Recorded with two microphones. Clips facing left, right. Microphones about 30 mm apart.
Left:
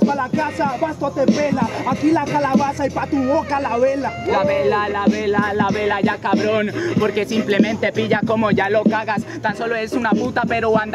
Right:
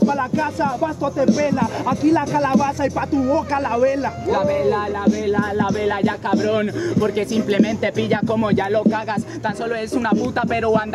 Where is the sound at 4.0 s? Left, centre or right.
Left.